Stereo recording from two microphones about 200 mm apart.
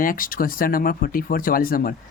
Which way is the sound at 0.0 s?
45° left (ahead or behind).